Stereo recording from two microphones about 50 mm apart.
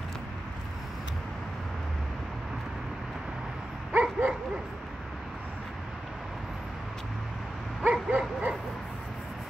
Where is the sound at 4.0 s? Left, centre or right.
Right.